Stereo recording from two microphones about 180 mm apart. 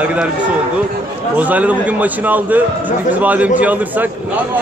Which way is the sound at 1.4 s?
10° right (ahead or behind).